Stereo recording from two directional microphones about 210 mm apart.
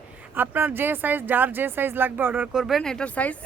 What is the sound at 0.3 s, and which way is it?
Speech, 10° right (ahead or behind).